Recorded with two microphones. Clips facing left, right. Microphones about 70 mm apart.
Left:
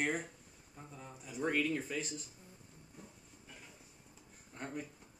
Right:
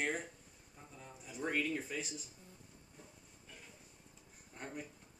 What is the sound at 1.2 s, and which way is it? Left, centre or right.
Speech, centre.